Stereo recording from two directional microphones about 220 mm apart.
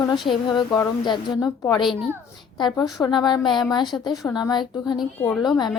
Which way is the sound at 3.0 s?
20° left (ahead or behind).